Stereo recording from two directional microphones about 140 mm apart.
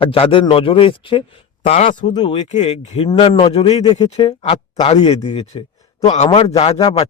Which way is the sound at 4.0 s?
45° left (ahead or behind).